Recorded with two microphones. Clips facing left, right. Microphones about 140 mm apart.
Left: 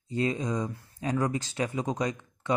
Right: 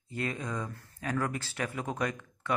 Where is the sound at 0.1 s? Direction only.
20° left (ahead or behind).